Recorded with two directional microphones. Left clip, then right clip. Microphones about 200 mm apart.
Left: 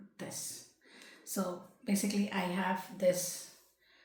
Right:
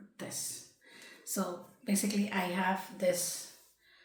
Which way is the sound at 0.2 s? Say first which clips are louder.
Right 1 dB; 10° left (ahead or behind).